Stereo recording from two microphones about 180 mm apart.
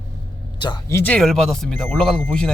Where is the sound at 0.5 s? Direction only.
25° left (ahead or behind).